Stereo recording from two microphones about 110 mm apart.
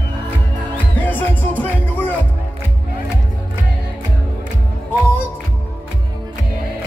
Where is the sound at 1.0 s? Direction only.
15° left (ahead or behind).